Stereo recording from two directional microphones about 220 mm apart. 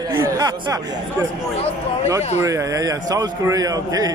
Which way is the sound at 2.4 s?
15° right (ahead or behind).